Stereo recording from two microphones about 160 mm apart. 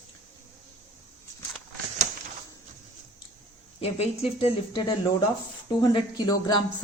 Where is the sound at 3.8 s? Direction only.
40° left (ahead or behind).